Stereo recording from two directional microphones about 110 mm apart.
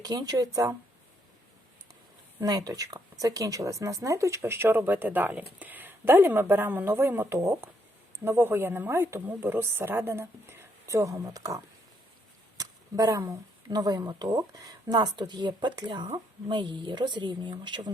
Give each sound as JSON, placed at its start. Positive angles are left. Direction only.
{"t": 0.0, "sound": "speech", "side_deg": -35}
{"t": 2.4, "sound": "speech", "side_deg": -35}